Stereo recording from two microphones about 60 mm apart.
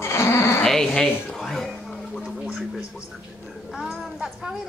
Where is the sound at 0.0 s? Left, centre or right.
Left.